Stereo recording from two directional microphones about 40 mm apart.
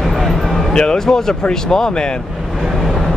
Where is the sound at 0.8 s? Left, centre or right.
Centre.